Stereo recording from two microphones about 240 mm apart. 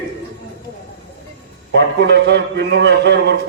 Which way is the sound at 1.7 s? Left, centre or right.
Right.